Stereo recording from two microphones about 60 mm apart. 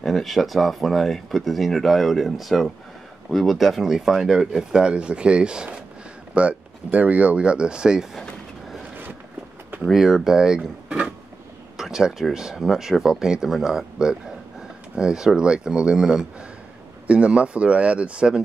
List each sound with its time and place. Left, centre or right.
0.0 s speech: centre
9.8 s speech: centre
17.1 s speech: right